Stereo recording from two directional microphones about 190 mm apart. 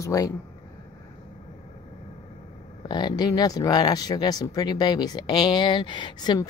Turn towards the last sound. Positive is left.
turn(degrees=25)  # may be behind; listen again after turning